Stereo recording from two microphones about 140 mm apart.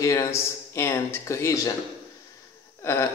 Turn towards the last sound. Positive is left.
turn(degrees=20)  # may be behind; listen again after turning